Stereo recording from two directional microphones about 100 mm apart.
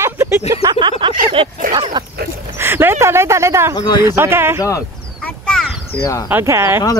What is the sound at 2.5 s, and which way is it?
Speech, 25° right (ahead or behind).